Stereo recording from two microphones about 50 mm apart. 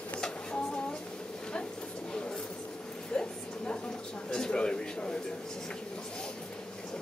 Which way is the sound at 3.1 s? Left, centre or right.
Centre.